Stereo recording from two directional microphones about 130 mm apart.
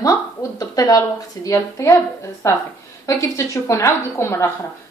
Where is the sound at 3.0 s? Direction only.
20° left (ahead or behind).